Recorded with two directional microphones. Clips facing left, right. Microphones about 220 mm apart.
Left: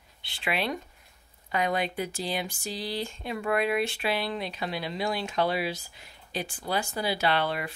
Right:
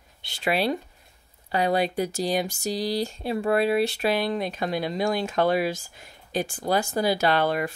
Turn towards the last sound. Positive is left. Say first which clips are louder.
# right 5 dB
turn(degrees=-45)  # may be behind; listen again after turning